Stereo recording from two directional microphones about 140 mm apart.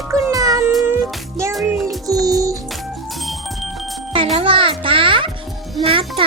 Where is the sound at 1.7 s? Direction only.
25° right (ahead or behind).